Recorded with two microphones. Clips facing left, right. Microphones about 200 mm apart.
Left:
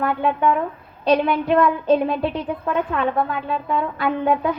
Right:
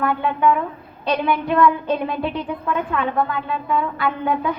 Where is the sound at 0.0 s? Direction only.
35° left (ahead or behind).